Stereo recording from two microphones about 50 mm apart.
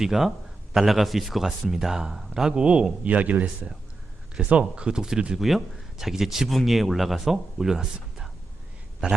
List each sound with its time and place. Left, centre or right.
0.0 s a man's voice: centre
5.4 s speech: centre